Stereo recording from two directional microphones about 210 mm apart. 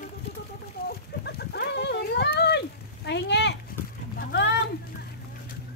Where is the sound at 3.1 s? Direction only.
55° left (ahead or behind).